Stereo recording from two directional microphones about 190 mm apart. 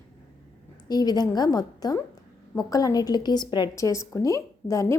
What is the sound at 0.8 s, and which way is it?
A woman's voice, 20° left (ahead or behind).